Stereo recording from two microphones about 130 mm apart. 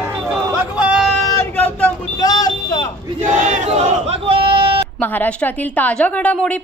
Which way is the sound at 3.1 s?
70° right (ahead or behind).